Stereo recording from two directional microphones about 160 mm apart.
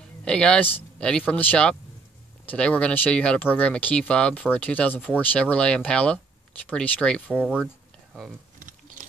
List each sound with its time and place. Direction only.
0.2 s speech: 5° left (ahead or behind)
7.6 s a sound: centre (ahead or behind)
8.5 s typing: 55° right (ahead or behind)